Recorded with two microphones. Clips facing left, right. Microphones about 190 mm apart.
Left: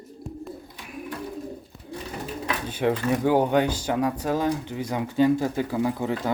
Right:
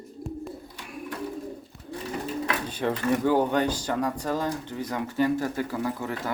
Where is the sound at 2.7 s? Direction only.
15° left (ahead or behind).